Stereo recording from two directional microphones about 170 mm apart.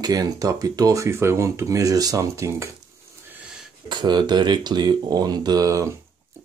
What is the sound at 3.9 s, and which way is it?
Speech, 25° right (ahead or behind).